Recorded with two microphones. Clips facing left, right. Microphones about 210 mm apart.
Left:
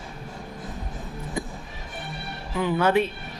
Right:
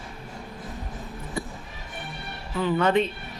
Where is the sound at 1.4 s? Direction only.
15° left (ahead or behind).